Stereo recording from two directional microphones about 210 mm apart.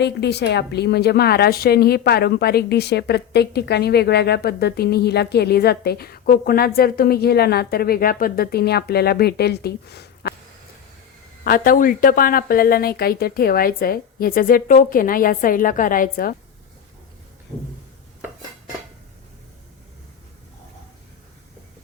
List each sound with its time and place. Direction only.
0.0 s a woman's voice: 55° left (ahead or behind)
11.4 s a woman's voice: 45° left (ahead or behind)